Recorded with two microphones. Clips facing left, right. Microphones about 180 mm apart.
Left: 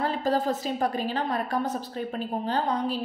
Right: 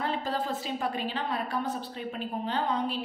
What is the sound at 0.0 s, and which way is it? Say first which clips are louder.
A woman's voice: left 5 dB; 40° left (ahead or behind).